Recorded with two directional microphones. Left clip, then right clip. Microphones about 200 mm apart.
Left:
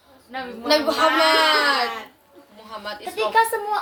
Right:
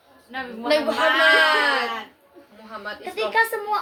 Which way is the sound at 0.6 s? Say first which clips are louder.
Left 2 dB; 20° left (ahead or behind).